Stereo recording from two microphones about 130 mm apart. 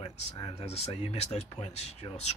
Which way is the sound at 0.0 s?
30° left (ahead or behind).